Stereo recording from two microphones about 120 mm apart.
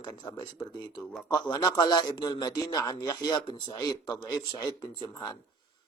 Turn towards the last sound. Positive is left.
turn(degrees=35)  # may be behind; listen again after turning